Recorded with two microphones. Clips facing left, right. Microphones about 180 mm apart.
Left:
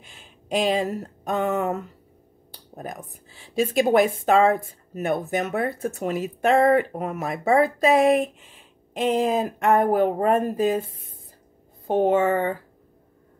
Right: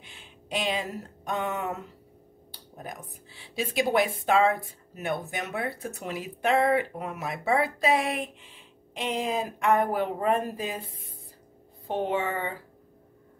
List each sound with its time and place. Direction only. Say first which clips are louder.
0.0 s speech: left 1 dB; 45° left (ahead or behind)
11.9 s speech: left 9 dB; 45° left (ahead or behind)